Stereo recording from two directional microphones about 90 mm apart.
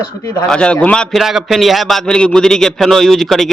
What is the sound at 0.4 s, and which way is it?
Speech, 10° left (ahead or behind).